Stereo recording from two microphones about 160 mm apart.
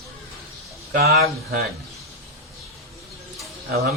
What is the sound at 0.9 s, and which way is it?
Speech, 75° right (ahead or behind).